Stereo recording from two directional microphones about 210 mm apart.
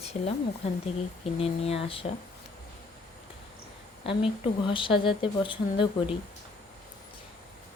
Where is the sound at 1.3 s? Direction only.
30° left (ahead or behind).